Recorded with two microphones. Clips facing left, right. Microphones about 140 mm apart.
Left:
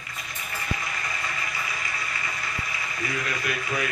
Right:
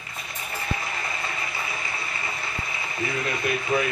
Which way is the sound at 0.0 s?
30° right (ahead or behind).